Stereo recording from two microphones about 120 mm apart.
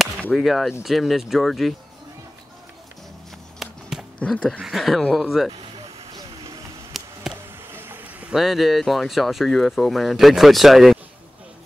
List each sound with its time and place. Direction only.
0.2 s speech: centre (ahead or behind)
3.6 s a sound: centre (ahead or behind)
4.2 s speech: 5° left (ahead or behind)
6.1 s vehicle: 35° right (ahead or behind)
6.9 s a sound: centre (ahead or behind)
7.7 s vehicle: 20° right (ahead or behind)
8.3 s speech: centre (ahead or behind)